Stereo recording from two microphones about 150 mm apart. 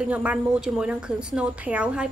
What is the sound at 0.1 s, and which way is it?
A woman's voice, 10° right (ahead or behind).